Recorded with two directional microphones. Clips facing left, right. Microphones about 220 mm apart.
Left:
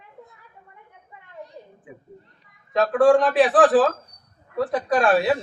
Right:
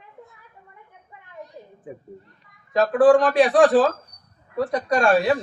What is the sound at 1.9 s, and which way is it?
Speech, 40° right (ahead or behind).